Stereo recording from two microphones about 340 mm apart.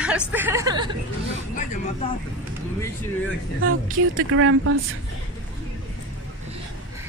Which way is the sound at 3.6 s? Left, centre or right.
Right.